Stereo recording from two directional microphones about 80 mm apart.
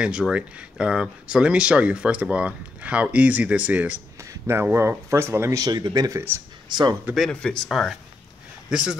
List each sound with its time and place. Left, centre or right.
0.3 s speech: centre
4.2 s a sound: right
4.6 s speech: right
5.6 s speech: right
6.1 s speech: right
6.7 s speech: right
7.2 s speech: centre
7.6 s speech: centre